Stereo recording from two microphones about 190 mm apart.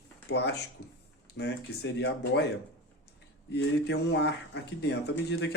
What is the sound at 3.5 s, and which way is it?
Speech, 65° left (ahead or behind).